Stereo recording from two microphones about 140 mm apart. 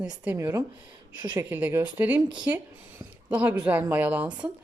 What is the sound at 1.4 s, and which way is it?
Speech, 15° right (ahead or behind).